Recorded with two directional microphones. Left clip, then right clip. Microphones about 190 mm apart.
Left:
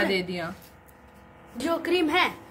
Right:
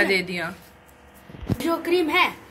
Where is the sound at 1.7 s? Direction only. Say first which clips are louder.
Right 2 dB; 10° right (ahead or behind).